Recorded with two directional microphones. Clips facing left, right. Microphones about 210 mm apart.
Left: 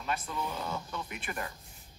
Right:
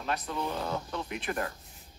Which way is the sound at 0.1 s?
5° left (ahead or behind).